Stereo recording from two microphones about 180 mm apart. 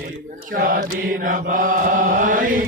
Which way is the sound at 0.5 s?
55° right (ahead or behind).